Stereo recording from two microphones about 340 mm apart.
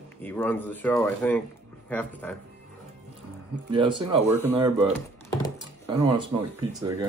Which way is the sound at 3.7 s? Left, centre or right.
Centre.